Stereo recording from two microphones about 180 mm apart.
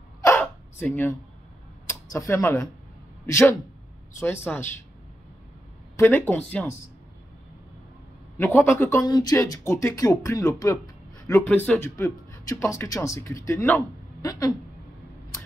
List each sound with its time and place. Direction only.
0.2 s a sound: 10° left (ahead or behind)
1.9 s speech: 15° left (ahead or behind)
5.9 s speech: 10° left (ahead or behind)
8.4 s speech: 10° left (ahead or behind)